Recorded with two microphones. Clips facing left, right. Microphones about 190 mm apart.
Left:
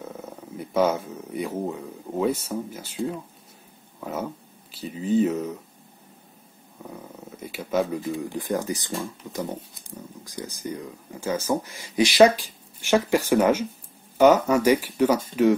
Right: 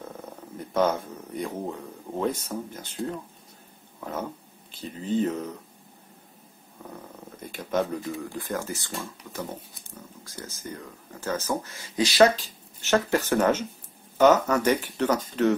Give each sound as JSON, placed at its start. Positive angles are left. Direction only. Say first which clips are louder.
{"t": 0.0, "sound": "speech", "louder": "left 2 dB", "side_deg": 10}
{"t": 6.8, "sound": "purr", "louder": "left 2 dB", "side_deg": 5}
{"t": 8.2, "sound": "speech", "louder": "left 4 dB", "side_deg": 15}